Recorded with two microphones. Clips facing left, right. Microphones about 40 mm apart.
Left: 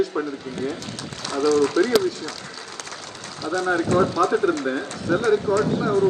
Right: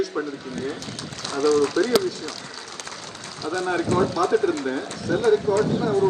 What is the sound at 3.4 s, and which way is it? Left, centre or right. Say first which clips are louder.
Speech: left 2 dB; left.